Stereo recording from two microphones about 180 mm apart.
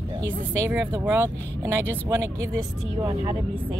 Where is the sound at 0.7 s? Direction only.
10° right (ahead or behind).